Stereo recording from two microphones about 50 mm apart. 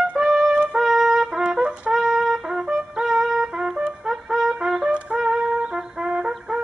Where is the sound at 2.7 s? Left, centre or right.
Centre.